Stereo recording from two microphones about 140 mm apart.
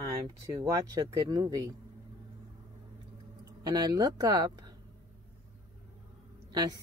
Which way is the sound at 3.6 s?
30° right (ahead or behind).